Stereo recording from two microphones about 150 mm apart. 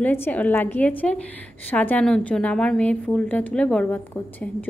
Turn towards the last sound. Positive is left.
turn(degrees=10)  # may be behind; listen again after turning